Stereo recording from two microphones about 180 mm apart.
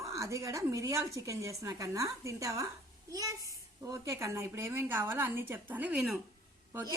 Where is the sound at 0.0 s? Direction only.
15° right (ahead or behind).